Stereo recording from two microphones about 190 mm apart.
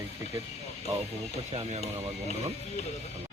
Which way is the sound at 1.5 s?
35° right (ahead or behind).